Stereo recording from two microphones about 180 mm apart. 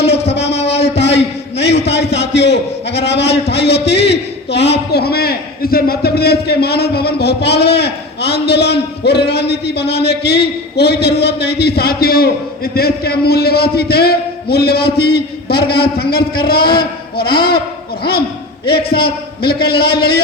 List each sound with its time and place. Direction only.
0.0 s a sound: 70° left (ahead or behind)
0.7 s a man's voice: 70° left (ahead or behind)
18.6 s a man's voice: 60° left (ahead or behind)